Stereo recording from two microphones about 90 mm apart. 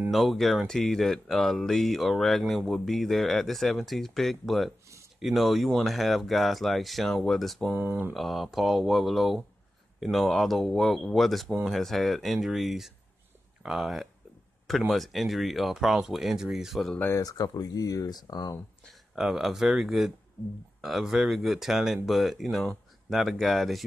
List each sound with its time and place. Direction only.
0.1 s speech: centre (ahead or behind)
7.7 s speech: 25° right (ahead or behind)
8.1 s speech: centre (ahead or behind)
17.2 s speech: 45° left (ahead or behind)
18.9 s speech: 5° right (ahead or behind)